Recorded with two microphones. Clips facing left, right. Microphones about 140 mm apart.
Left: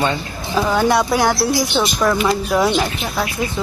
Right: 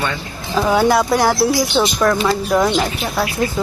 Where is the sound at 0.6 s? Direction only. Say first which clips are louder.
Right 2 dB; 5° right (ahead or behind).